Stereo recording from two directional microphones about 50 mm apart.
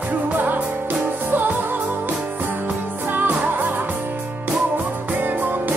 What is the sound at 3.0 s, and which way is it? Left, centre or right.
Music, right.